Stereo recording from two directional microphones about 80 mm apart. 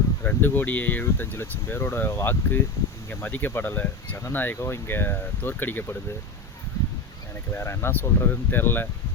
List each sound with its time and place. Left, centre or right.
0.3 s speech: left
7.5 s speech: left